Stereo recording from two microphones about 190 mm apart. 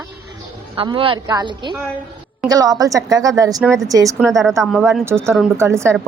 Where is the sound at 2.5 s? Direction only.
20° right (ahead or behind).